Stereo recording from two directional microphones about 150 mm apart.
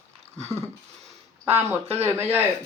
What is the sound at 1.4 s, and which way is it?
Speech, 15° right (ahead or behind).